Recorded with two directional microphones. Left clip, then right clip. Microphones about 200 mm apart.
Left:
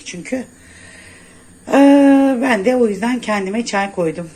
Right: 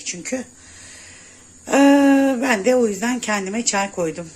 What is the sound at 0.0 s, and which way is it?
Speech, 5° right (ahead or behind).